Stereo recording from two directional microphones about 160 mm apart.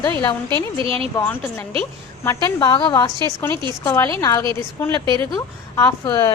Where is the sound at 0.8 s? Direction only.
35° right (ahead or behind).